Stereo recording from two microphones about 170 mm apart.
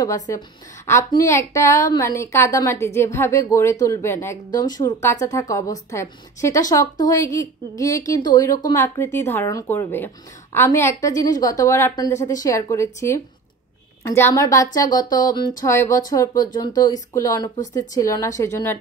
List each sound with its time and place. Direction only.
0.0 s a woman's voice: 20° left (ahead or behind)